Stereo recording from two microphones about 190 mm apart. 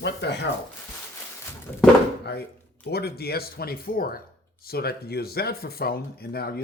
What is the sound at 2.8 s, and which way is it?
Speech, 55° left (ahead or behind).